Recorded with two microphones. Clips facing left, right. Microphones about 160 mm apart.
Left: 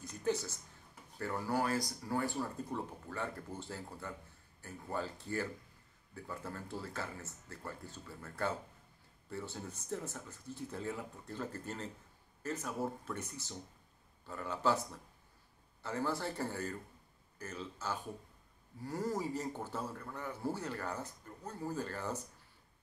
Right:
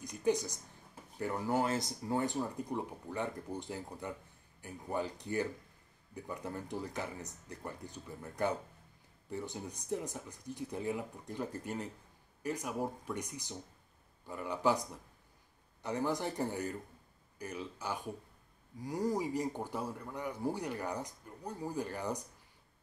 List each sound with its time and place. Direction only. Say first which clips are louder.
0.0 s speech: right 3 dB; 15° right (ahead or behind)